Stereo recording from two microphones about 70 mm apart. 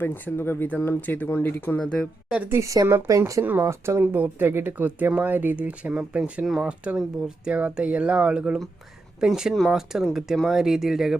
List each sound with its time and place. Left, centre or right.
0.0 s speech: left
2.5 s speech: right
3.4 s speech: right
3.7 s speech: right
4.0 s speech: right
6.4 s speech: centre
6.7 s speech: centre